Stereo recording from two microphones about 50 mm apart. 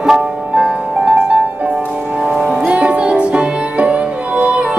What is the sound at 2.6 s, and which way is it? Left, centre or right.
Music, right.